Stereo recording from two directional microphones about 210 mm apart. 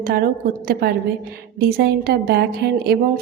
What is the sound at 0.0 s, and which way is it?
A woman's voice, 45° right (ahead or behind).